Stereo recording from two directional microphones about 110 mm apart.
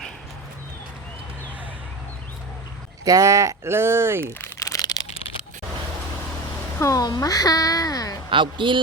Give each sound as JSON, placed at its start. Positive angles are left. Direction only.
{"t": 3.0, "sound": "speech", "side_deg": -35}
{"t": 4.4, "sound": "crumpling", "side_deg": 30}
{"t": 6.7, "sound": "speech", "side_deg": 30}
{"t": 8.3, "sound": "speech", "side_deg": -50}